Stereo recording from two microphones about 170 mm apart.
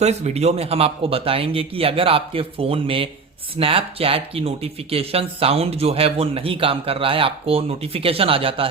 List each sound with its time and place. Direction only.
0.0 s speech: 40° right (ahead or behind)